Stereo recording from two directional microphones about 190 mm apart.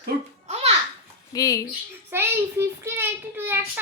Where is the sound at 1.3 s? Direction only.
20° left (ahead or behind).